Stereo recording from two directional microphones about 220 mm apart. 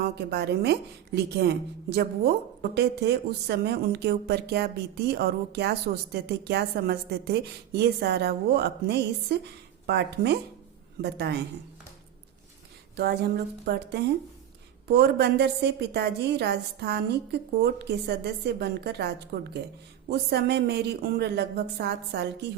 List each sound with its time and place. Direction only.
0.0 s speech: 45° right (ahead or behind)
13.0 s speech: 50° right (ahead or behind)